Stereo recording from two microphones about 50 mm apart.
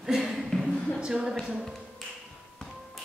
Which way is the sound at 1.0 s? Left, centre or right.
Centre.